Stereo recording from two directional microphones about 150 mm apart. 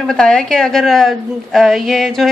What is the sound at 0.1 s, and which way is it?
A woman's voice, 5° left (ahead or behind).